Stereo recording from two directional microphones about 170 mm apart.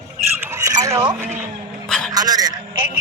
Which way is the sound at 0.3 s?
15° right (ahead or behind).